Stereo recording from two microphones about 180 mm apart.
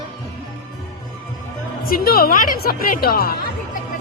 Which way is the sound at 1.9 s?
55° left (ahead or behind).